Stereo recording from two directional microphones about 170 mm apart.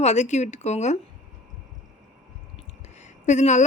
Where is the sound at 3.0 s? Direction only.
45° left (ahead or behind).